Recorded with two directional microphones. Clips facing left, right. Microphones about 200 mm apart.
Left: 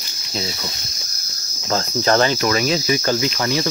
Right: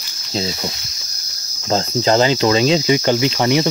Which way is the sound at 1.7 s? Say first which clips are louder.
Right 2 dB; 25° right (ahead or behind).